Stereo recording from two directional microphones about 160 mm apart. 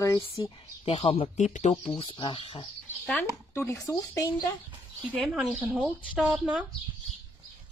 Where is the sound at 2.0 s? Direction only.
30° left (ahead or behind).